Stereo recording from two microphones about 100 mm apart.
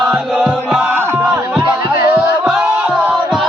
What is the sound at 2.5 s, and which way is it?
Music, 15° right (ahead or behind).